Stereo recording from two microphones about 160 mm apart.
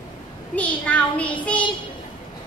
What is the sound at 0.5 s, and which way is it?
Child singing, 10° left (ahead or behind).